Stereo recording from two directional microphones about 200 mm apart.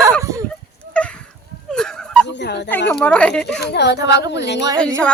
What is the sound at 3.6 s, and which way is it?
Speech, 55° left (ahead or behind).